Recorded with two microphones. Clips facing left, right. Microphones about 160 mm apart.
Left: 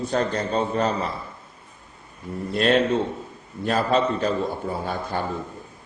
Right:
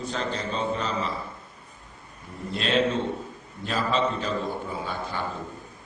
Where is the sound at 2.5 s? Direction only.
50° left (ahead or behind).